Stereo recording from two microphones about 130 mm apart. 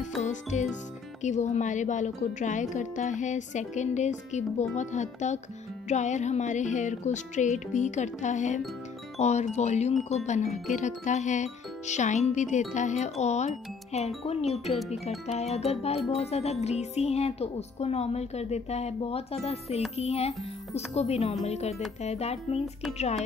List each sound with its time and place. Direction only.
0.2 s music: 65° left (ahead or behind)
1.2 s speech: 65° left (ahead or behind)